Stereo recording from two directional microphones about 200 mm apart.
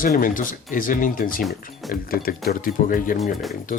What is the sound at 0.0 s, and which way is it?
Speech, 45° left (ahead or behind).